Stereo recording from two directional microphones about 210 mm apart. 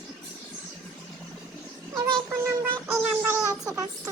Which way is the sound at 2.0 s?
10° right (ahead or behind).